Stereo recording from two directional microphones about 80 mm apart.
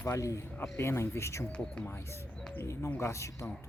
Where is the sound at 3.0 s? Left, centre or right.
Left.